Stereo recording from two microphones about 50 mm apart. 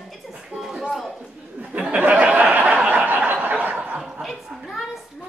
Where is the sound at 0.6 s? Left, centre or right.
Centre.